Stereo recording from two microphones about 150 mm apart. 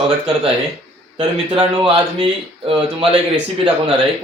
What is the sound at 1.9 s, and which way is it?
Speech, 35° right (ahead or behind).